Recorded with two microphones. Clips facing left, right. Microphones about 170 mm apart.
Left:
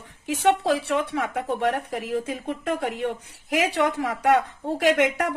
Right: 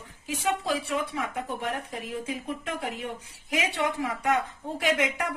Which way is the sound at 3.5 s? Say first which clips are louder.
Left 6 dB; 80° left.